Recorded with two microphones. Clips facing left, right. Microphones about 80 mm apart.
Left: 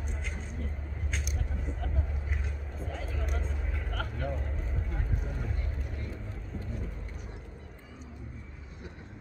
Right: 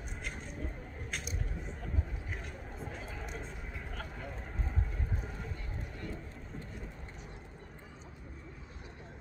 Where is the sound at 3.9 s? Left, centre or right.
Left.